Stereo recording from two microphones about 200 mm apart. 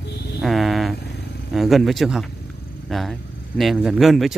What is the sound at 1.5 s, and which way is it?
Speech, centre (ahead or behind).